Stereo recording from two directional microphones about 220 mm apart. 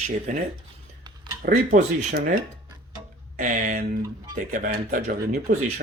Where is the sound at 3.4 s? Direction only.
35° right (ahead or behind).